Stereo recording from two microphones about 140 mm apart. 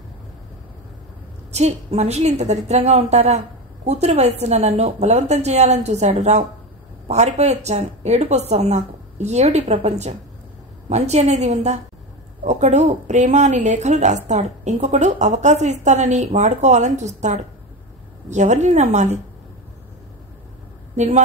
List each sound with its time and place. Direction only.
1.5 s a woman's voice: 50° right (ahead or behind)
20.9 s speech: 55° right (ahead or behind)